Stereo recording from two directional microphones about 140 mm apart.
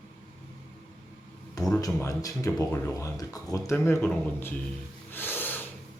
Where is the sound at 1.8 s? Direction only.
25° left (ahead or behind).